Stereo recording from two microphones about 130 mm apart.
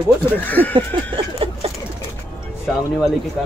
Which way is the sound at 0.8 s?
45° right (ahead or behind).